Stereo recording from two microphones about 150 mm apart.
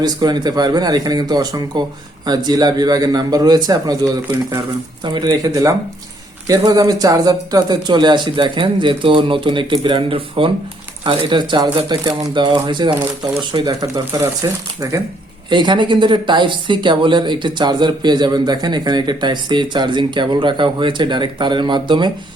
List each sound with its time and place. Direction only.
0.0 s a man's voice: 30° right (ahead or behind)